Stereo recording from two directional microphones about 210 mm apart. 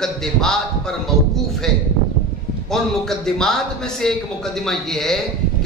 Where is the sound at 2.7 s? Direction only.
Centre (ahead or behind).